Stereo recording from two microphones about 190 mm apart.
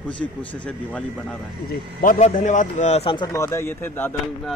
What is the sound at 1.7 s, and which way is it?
A man's voice, 45° left (ahead or behind).